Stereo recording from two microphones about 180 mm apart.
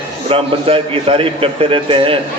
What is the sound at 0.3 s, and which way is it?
A man's voice, 30° right (ahead or behind).